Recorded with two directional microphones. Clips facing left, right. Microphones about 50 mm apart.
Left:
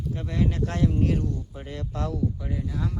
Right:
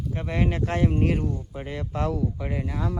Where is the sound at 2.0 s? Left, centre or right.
Right.